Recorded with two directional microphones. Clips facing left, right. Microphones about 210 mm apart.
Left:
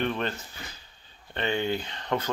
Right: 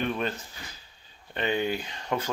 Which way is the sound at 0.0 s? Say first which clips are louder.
Even; 5° right (ahead or behind).